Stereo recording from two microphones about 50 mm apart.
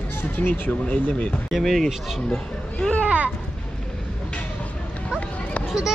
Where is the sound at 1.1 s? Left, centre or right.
Left.